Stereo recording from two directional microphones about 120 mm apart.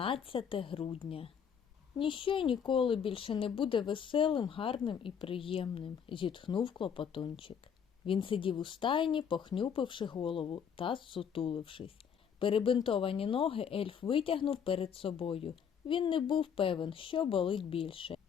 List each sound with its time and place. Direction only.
0.0 s speech: 50° left (ahead or behind)